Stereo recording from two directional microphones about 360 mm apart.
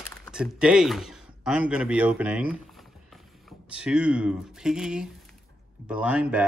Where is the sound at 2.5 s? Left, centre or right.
Centre.